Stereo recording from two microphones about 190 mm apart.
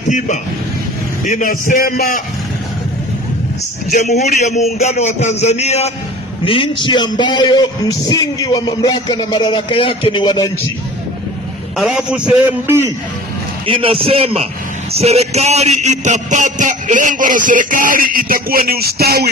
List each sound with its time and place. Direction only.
1.2 s a man's voice: 45° left (ahead or behind)
3.9 s a man's voice: 40° left (ahead or behind)
11.7 s a man's voice: centre (ahead or behind)
13.7 s a man's voice: 30° right (ahead or behind); by 19.2 s 55° right (ahead or behind)